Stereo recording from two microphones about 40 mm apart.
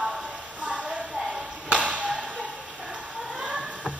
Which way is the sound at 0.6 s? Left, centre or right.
Right.